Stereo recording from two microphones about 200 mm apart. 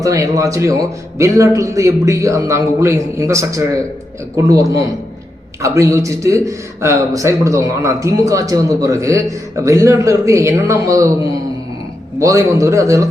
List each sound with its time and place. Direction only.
0.0 s a man's voice: 15° right (ahead or behind)
12.2 s a man's voice: 15° right (ahead or behind)